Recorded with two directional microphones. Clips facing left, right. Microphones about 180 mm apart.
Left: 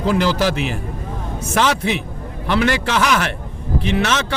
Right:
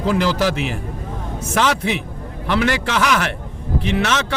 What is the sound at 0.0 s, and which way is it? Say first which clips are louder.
Speech: left 1 dB; 25° left (ahead or behind).